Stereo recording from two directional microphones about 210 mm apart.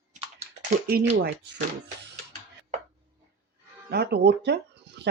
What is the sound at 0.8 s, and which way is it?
Speech, 50° right (ahead or behind).